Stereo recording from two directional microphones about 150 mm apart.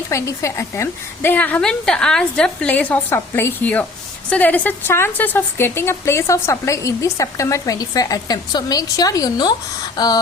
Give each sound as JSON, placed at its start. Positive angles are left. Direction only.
{"t": 0.1, "sound": "a woman's voice", "side_deg": 20}